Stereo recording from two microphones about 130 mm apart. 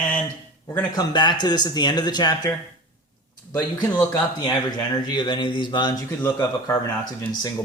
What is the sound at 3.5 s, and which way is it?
Speech, 30° left (ahead or behind).